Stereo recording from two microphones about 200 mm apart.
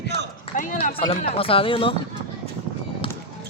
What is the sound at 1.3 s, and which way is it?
Speech, 30° left (ahead or behind).